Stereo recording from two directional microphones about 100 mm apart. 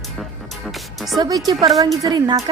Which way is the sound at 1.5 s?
40° right (ahead or behind).